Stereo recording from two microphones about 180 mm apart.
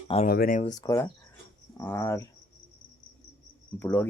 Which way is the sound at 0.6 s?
20° left (ahead or behind).